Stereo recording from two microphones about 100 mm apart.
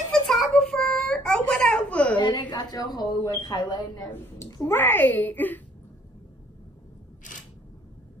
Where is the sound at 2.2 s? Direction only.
45° left (ahead or behind).